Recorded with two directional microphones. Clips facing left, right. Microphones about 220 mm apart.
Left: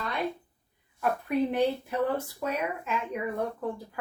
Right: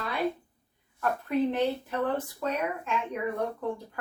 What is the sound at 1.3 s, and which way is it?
Speech, 15° left (ahead or behind).